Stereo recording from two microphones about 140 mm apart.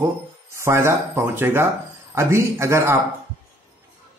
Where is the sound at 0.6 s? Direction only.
20° right (ahead or behind).